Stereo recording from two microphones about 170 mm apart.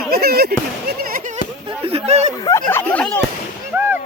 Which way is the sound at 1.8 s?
40° right (ahead or behind).